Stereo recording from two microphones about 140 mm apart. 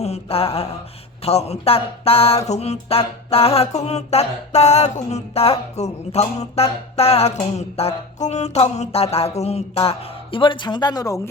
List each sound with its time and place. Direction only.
0.0 s mantra: 45° left (ahead or behind)
1.2 s a sound: 50° left (ahead or behind)
10.3 s speech: 35° left (ahead or behind)